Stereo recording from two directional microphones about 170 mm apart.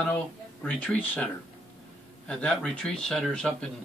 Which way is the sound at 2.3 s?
5° left (ahead or behind).